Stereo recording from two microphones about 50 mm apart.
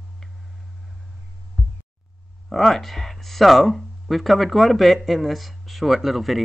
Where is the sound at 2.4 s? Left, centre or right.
Centre.